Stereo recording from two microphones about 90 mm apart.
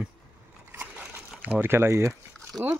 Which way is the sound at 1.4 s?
20° right (ahead or behind).